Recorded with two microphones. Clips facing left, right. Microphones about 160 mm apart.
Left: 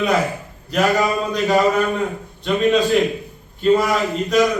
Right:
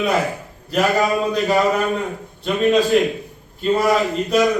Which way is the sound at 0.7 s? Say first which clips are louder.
Even; centre (ahead or behind).